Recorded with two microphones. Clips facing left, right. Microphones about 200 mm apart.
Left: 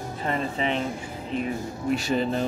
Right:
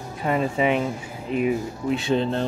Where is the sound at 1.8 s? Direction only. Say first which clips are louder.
Right 2 dB; centre (ahead or behind).